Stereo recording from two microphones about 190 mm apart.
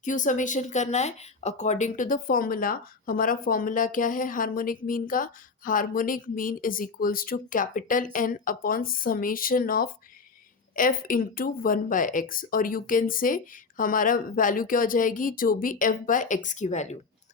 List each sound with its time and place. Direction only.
0.0 s speech: 40° left (ahead or behind)